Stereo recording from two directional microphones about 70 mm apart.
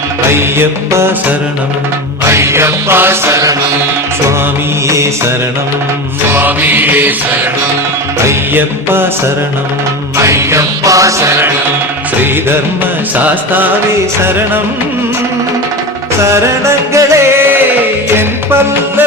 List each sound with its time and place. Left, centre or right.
0.3 s music: right
2.2 s music: right
4.9 s music: right
6.2 s mantra: right
8.5 s music: right
10.2 s music: right
13.1 s mantra: right
14.2 s music: right
16.2 s music: right
18.1 s music: right